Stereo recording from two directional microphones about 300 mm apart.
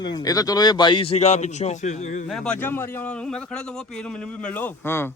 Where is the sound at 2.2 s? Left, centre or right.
Centre.